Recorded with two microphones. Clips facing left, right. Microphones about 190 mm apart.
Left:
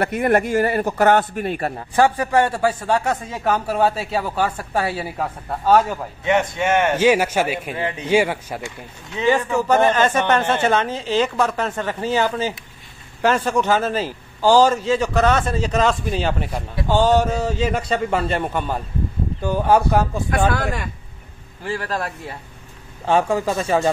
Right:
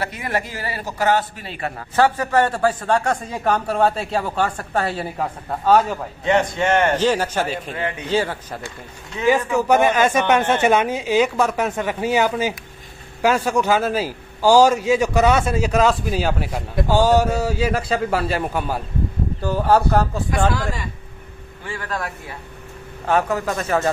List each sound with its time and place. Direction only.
0.0 s a man's voice: 55° left (ahead or behind)
1.8 s speech: 15° left (ahead or behind)
9.2 s a man's voice: 5° right (ahead or behind)
19.4 s speech: 10° left (ahead or behind)
20.5 s a man's voice: 55° left (ahead or behind)
21.6 s speech: 35° left (ahead or behind)
23.0 s a man's voice: 25° left (ahead or behind)